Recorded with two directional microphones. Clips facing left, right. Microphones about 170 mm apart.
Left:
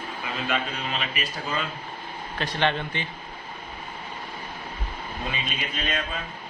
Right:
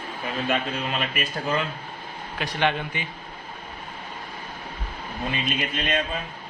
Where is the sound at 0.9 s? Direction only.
45° right (ahead or behind).